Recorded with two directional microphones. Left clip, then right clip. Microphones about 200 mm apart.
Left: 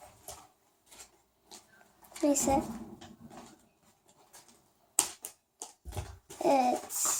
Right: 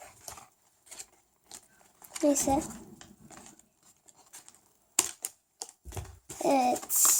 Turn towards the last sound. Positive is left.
turn(degrees=-40)  # may be behind; listen again after turning